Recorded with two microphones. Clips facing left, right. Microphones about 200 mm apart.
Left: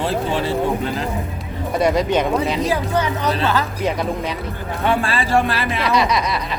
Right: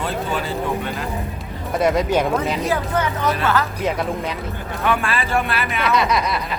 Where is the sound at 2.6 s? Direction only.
15° left (ahead or behind).